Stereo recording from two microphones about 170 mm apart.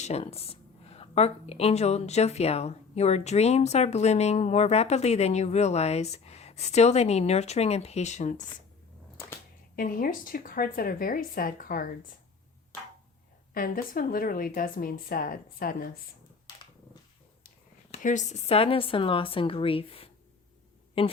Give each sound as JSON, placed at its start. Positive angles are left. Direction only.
{"t": 0.0, "sound": "speech", "side_deg": 40}
{"t": 9.7, "sound": "speech", "side_deg": 55}
{"t": 13.5, "sound": "speech", "side_deg": 55}
{"t": 17.9, "sound": "speech", "side_deg": 45}